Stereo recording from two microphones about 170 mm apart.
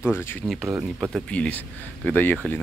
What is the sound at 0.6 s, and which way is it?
Speech, 10° right (ahead or behind).